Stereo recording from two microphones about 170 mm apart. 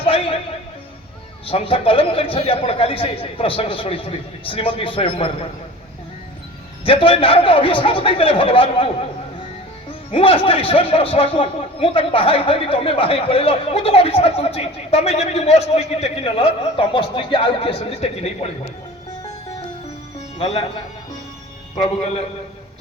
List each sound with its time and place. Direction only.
0.0 s music: 35° left (ahead or behind)
1.5 s a man's voice: 35° left (ahead or behind)
6.8 s a man's voice: 30° left (ahead or behind)
10.1 s a man's voice: 30° left (ahead or behind)
20.1 s music: 35° left (ahead or behind)
21.8 s a man's voice: 40° left (ahead or behind)